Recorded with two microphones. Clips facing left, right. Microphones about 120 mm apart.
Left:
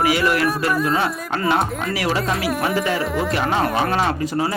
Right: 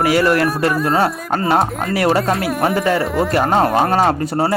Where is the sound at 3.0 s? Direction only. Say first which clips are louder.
Right 4 dB; centre (ahead or behind).